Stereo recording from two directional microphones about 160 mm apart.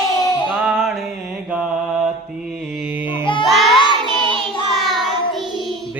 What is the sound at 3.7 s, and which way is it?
Child singing, 30° left (ahead or behind).